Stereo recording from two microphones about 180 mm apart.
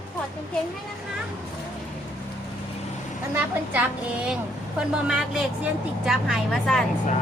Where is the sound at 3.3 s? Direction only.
10° right (ahead or behind).